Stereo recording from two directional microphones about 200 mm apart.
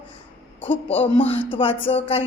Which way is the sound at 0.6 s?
10° left (ahead or behind).